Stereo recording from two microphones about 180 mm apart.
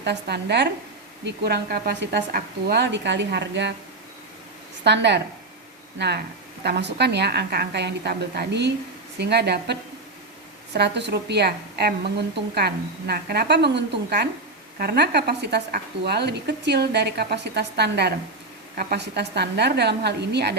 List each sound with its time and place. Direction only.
0.0 s a woman's voice: 70° right (ahead or behind)
4.8 s a woman's voice: 70° right (ahead or behind)
10.8 s a woman's voice: 70° right (ahead or behind)